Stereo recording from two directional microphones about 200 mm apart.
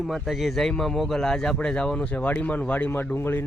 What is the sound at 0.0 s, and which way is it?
A man's voice, centre (ahead or behind).